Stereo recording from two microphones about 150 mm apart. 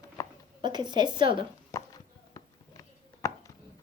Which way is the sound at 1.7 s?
25° left (ahead or behind).